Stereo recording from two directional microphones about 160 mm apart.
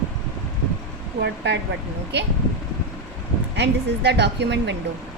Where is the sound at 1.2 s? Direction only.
90° right.